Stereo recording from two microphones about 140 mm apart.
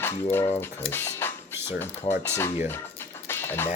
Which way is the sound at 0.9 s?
15° left (ahead or behind).